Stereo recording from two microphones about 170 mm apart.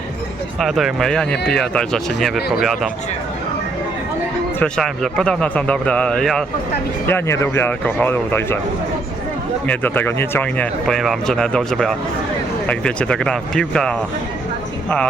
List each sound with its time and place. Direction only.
0.6 s speech: centre (ahead or behind)
4.6 s speech: 5° left (ahead or behind)
7.1 s speech: 15° left (ahead or behind)
9.6 s speech: 10° left (ahead or behind)